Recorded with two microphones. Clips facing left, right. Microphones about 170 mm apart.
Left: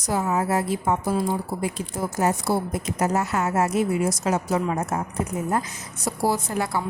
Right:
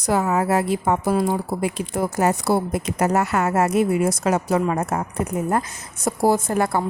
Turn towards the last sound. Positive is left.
turn(degrees=-50)  # may be behind; listen again after turning